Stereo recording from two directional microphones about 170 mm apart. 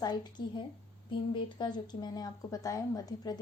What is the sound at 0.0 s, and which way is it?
Speech, 25° left (ahead or behind).